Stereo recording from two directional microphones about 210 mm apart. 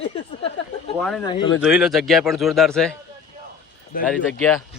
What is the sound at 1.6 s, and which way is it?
A man's voice, 5° right (ahead or behind).